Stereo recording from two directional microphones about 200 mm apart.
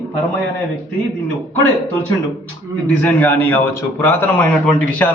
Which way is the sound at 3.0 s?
10° left (ahead or behind).